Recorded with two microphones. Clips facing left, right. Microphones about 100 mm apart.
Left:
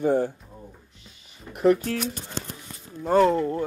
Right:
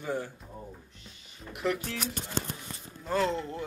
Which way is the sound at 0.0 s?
50° left (ahead or behind).